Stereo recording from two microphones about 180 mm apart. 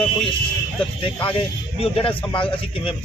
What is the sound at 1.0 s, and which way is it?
A man's voice, 30° left (ahead or behind).